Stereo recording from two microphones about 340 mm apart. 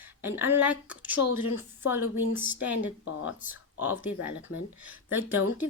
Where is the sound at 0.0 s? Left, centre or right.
Centre.